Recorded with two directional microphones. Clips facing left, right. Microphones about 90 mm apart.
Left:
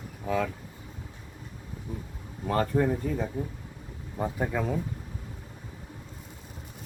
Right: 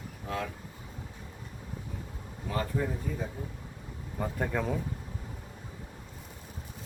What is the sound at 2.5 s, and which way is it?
Speech, 55° left (ahead or behind).